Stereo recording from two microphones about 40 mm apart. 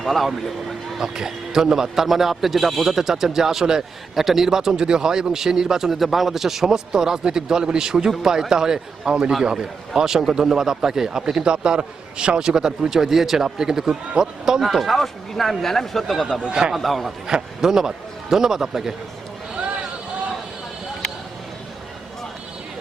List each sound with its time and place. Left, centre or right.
0.0 s speech: centre
1.1 s a man's voice: centre
14.6 s speech: centre
16.4 s a man's voice: right
16.7 s speech: centre
17.2 s a man's voice: centre